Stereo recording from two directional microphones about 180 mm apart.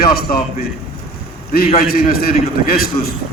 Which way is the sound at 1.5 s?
55° left (ahead or behind).